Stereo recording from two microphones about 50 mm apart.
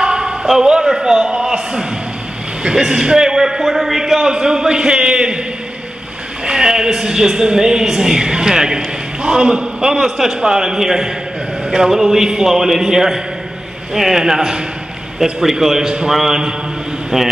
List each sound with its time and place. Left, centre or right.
0.0 s a sound: centre
0.5 s a woman's voice: centre
6.4 s a woman's voice: centre